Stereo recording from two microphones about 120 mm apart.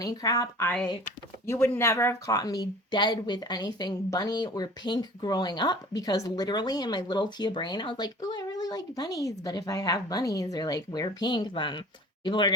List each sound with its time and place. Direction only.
0.0 s speech: 30° left (ahead or behind)
1.5 s speech: 20° left (ahead or behind); by 12.5 s 40° left (ahead or behind)